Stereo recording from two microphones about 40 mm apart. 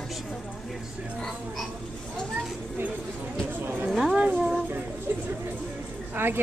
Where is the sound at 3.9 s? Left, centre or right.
Centre.